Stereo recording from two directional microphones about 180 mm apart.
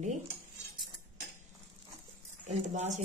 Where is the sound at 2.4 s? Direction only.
40° right (ahead or behind).